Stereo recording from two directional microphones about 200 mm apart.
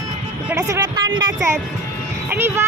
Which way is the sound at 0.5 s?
15° right (ahead or behind).